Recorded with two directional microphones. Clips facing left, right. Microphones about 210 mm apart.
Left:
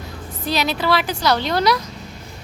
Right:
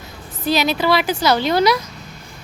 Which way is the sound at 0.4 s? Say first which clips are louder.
Right 3 dB; centre (ahead or behind).